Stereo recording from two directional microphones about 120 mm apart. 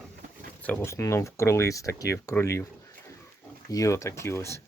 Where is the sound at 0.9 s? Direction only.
25° left (ahead or behind).